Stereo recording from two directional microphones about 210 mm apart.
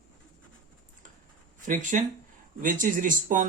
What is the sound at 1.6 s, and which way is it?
Speech, 40° right (ahead or behind).